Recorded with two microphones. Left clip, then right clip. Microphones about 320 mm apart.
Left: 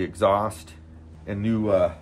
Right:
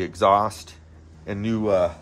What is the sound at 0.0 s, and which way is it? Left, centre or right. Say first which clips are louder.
Speech: right 3 dB; right.